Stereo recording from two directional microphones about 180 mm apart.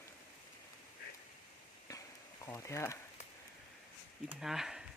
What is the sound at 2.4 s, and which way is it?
Speech, 15° left (ahead or behind).